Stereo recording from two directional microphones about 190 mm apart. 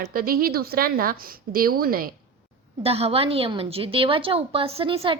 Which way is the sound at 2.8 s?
30° right (ahead or behind).